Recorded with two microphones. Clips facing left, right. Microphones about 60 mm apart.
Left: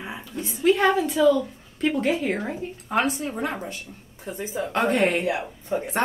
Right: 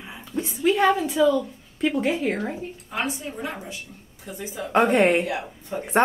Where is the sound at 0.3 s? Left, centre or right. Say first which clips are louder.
Right 5 dB; right.